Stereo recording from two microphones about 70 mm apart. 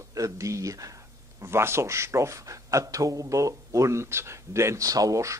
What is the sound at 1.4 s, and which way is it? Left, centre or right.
Speech, right.